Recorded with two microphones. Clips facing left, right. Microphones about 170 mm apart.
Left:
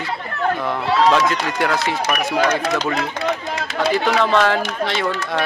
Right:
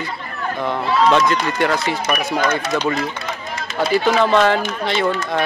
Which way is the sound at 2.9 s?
70° left (ahead or behind).